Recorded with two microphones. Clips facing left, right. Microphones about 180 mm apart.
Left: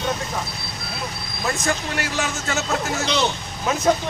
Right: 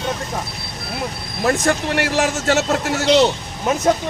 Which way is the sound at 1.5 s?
65° right (ahead or behind).